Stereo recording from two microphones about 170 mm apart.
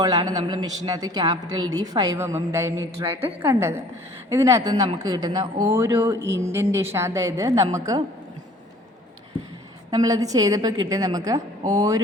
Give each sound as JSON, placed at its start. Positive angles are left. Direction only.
{"t": 0.0, "sound": "a woman's voice", "side_deg": -20}
{"t": 9.9, "sound": "a woman's voice", "side_deg": -20}